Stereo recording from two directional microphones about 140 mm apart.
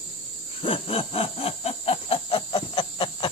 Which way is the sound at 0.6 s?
40° left (ahead or behind).